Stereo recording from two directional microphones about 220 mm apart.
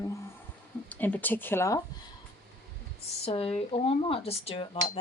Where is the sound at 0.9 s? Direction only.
5° left (ahead or behind).